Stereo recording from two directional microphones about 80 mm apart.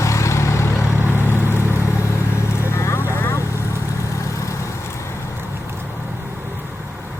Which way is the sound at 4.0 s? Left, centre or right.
Left.